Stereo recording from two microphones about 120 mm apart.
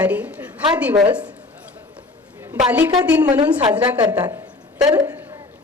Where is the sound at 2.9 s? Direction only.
35° right (ahead or behind).